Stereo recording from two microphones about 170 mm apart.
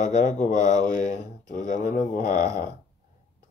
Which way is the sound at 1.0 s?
50° left (ahead or behind).